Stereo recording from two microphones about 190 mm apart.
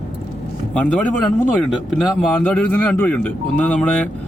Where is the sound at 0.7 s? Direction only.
5° left (ahead or behind).